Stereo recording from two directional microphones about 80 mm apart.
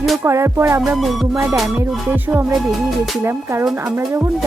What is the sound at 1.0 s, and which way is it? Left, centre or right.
Speech, centre.